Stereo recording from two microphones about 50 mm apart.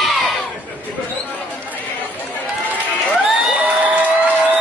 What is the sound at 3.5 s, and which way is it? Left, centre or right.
Crowd, right.